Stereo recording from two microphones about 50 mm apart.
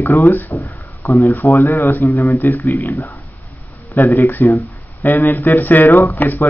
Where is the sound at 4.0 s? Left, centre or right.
Left.